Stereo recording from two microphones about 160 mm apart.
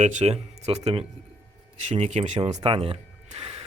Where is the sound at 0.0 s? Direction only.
50° right (ahead or behind).